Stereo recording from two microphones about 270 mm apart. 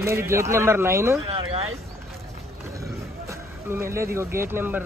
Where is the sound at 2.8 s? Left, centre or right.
Centre.